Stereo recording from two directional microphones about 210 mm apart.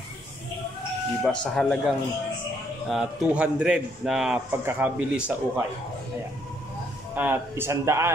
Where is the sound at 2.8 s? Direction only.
5° right (ahead or behind).